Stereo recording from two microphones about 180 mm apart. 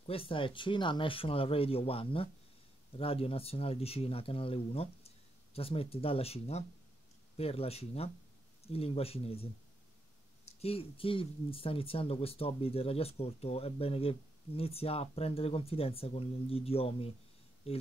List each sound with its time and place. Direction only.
0.0 s speech: 30° left (ahead or behind)
10.6 s speech: 30° left (ahead or behind)